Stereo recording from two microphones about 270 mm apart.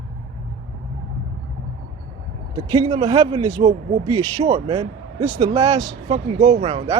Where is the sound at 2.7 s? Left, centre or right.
Centre.